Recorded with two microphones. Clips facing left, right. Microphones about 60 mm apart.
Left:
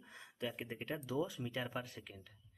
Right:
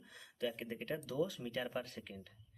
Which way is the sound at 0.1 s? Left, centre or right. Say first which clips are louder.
Left 3 dB; left.